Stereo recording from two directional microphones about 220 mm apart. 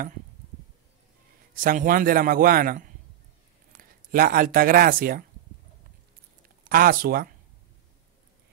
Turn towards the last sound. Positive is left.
turn(degrees=-40)  # may be behind; listen again after turning